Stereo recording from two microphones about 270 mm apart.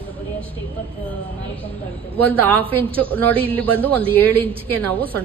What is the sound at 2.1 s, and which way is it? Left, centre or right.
A woman's voice, centre.